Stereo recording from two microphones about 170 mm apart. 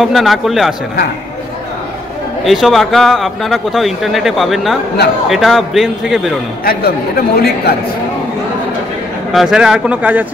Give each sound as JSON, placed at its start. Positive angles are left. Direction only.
{"t": 0.0, "sound": "a man's voice", "side_deg": 0}
{"t": 2.4, "sound": "a man's voice", "side_deg": 0}
{"t": 6.6, "sound": "speech", "side_deg": 60}
{"t": 9.3, "sound": "a man's voice", "side_deg": 0}